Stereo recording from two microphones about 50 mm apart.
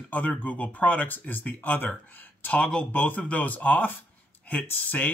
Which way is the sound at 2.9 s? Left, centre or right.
Left.